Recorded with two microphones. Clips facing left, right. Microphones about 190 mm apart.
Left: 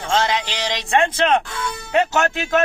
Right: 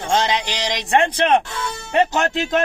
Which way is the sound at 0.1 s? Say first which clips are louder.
Even; 15° right (ahead or behind).